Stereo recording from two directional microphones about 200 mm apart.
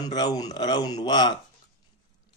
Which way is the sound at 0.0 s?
20° left (ahead or behind).